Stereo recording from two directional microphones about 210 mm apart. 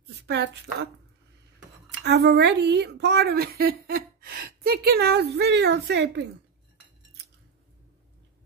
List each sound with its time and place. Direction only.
0.0 s a woman's voice: 50° right (ahead or behind)
1.9 s speech: 55° right (ahead or behind)